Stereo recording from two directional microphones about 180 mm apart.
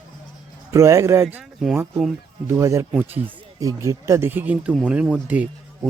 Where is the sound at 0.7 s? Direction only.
15° right (ahead or behind).